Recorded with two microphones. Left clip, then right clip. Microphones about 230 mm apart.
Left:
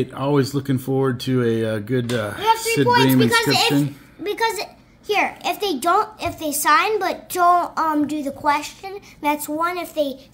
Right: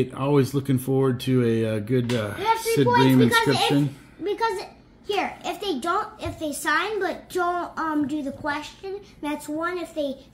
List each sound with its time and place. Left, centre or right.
0.0 s speech: centre
4.2 s a child's voice: left